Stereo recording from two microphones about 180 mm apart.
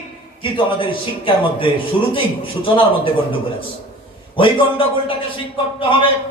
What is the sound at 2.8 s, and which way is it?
Speech, 30° left (ahead or behind).